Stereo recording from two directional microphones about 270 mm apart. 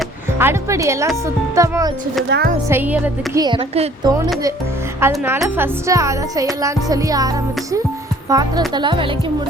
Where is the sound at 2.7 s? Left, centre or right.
Centre.